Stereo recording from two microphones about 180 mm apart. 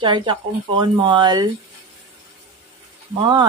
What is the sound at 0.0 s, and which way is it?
Speech, 25° right (ahead or behind).